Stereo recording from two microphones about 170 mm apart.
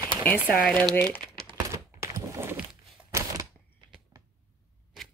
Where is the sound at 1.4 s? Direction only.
20° right (ahead or behind).